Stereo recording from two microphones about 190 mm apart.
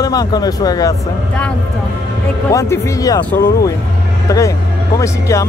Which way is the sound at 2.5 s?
15° left (ahead or behind).